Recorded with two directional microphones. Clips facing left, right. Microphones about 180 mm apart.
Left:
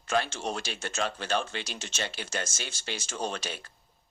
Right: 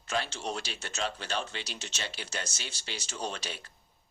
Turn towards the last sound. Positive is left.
turn(degrees=50)  # may be behind; listen again after turning